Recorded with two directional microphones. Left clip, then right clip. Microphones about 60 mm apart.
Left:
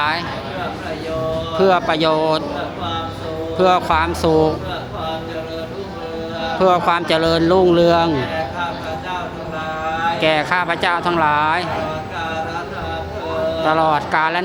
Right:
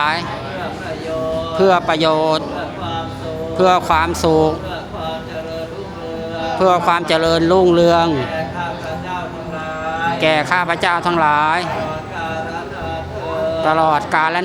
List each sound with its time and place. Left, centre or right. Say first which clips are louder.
1.5 s speech: right 1 dB; right
3.6 s speech: right 2 dB; right
6.6 s speech: right 1 dB; centre
10.2 s speech: right 3 dB; right
13.6 s speech: right 2 dB; centre